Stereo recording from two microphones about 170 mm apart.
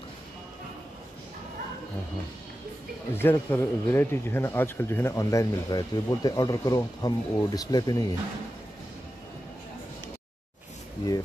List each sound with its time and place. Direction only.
3.2 s speech: 10° left (ahead or behind)